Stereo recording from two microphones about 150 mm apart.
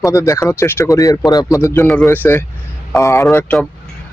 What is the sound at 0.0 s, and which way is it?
Speech, 20° left (ahead or behind).